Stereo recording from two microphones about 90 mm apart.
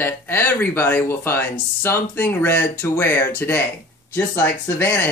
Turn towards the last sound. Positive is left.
turn(degrees=25)  # may be behind; listen again after turning